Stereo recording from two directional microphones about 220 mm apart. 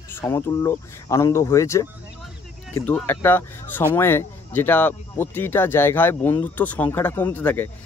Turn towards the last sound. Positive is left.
turn(degrees=10)  # may be behind; listen again after turning